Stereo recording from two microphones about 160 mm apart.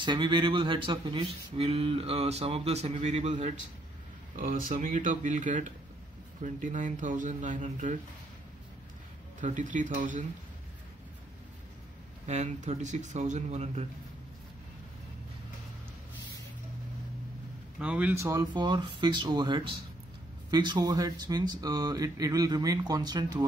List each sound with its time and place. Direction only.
0.0 s speech: 30° right (ahead or behind); by 3.5 s 45° right (ahead or behind)
4.6 s speech: 60° right (ahead or behind)
9.4 s speech: 50° right (ahead or behind)
12.3 s speech: 45° right (ahead or behind)
17.7 s speech: 5° right (ahead or behind); by 23.4 s 25° right (ahead or behind)